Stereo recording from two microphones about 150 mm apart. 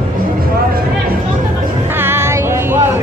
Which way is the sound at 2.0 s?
15° right (ahead or behind).